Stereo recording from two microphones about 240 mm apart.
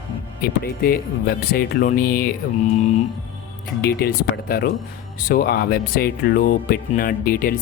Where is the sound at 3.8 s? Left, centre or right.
Left.